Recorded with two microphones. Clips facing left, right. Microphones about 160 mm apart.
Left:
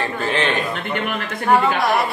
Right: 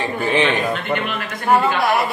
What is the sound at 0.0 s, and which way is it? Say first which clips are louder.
Speech: right 3 dB; 15° right (ahead or behind).